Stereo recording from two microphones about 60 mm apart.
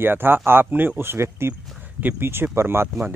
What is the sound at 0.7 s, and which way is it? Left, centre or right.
Speech, right.